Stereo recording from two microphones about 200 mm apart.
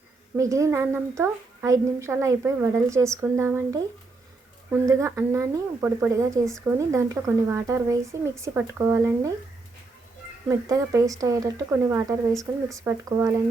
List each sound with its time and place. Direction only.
0.3 s a woman's voice: 15° right (ahead or behind)
10.5 s a woman's voice: 15° right (ahead or behind)